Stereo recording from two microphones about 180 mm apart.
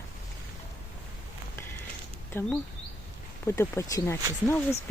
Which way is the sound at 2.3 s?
10° left (ahead or behind).